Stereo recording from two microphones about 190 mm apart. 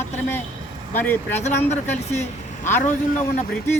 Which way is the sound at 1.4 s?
35° left (ahead or behind).